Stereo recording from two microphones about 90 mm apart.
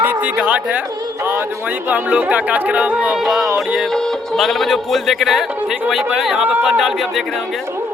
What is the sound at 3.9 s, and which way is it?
A man's voice, 5° left (ahead or behind).